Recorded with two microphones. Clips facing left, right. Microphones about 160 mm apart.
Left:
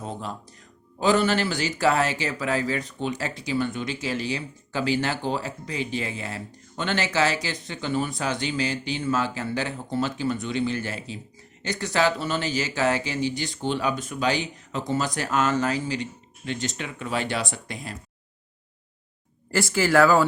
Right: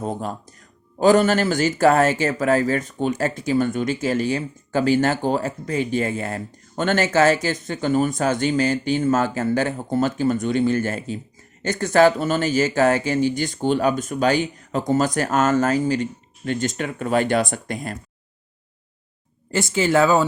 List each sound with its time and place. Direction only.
0.0 s speech: 50° right (ahead or behind)
19.5 s speech: 20° right (ahead or behind)